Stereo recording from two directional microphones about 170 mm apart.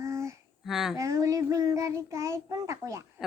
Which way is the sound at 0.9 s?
20° right (ahead or behind).